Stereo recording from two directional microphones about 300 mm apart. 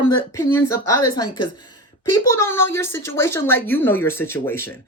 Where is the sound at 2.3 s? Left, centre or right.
Centre.